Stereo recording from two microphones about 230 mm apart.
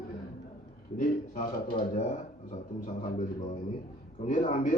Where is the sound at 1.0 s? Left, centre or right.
Left.